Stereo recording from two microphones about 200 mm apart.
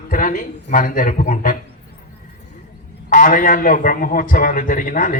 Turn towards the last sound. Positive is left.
turn(degrees=40)  # may be behind; listen again after turning